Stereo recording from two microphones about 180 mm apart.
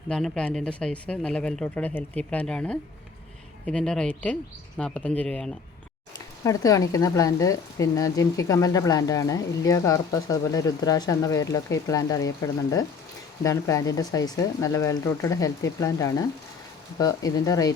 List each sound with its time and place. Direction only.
0.1 s speech: 5° left (ahead or behind)
6.1 s speech: 20° left (ahead or behind)